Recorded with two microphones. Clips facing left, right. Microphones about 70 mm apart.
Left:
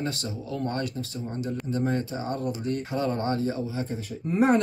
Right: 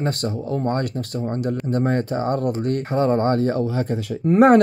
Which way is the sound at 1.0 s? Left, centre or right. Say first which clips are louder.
Right 8 dB; right.